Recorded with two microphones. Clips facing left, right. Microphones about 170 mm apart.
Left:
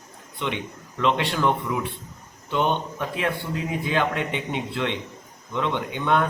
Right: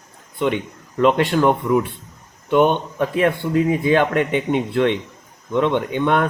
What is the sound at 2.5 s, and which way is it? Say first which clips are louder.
A man's voice: right 8 dB; 55° right (ahead or behind).